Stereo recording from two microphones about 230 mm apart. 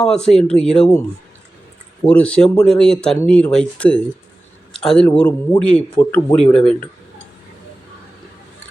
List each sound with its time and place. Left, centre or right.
0.0 s speech: centre
2.0 s speech: centre